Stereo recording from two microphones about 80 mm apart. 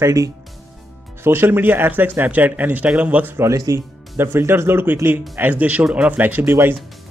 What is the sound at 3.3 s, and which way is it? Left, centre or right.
Speech, right.